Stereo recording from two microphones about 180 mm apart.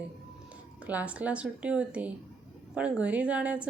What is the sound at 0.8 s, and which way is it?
A woman's voice, 10° right (ahead or behind).